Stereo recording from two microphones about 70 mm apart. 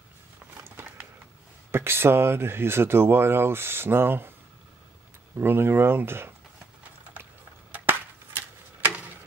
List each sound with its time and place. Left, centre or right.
0.8 s a sound: right
1.7 s speech: right
5.4 s speech: right
7.7 s chop: right